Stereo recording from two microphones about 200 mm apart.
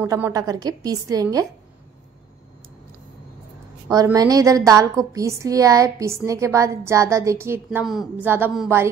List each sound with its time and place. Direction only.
0.0 s a woman's voice: 15° right (ahead or behind)
3.9 s a woman's voice: 20° right (ahead or behind)
7.8 s a woman's voice: centre (ahead or behind)